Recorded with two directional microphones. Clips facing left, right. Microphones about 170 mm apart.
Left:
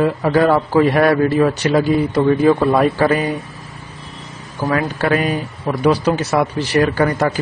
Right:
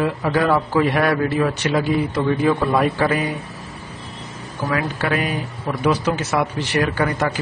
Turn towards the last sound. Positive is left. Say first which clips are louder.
# left 4 dB
turn(degrees=35)  # may be behind; listen again after turning